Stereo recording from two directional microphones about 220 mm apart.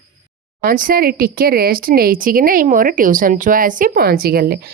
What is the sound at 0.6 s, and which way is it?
Speech, 40° right (ahead or behind).